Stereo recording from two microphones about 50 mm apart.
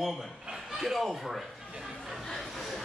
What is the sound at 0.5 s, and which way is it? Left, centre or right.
Chuckle, centre.